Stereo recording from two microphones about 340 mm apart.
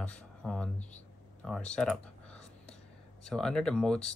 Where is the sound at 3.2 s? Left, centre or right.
Centre.